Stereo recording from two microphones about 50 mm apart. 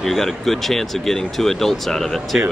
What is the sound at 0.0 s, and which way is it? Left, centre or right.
Speech, centre.